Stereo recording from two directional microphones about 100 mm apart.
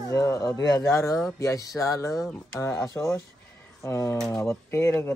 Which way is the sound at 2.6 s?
30° left (ahead or behind).